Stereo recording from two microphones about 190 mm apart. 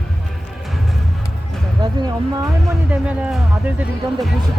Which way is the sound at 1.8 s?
20° right (ahead or behind).